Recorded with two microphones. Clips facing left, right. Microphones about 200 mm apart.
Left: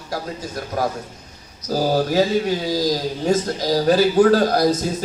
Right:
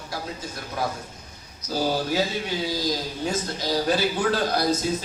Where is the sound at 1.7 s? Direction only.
40° left (ahead or behind).